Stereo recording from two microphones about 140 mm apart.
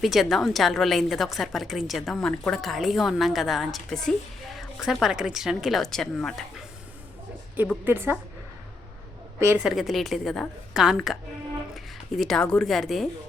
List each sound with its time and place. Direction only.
0.0 s a woman's voice: centre (ahead or behind)
7.9 s a woman's voice: 15° right (ahead or behind)
9.6 s a woman's voice: centre (ahead or behind)